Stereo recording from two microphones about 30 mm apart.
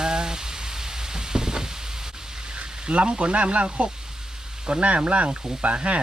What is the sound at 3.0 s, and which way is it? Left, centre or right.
Speech, right.